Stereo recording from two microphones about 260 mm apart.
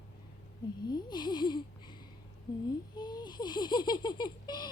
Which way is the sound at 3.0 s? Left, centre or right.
Centre.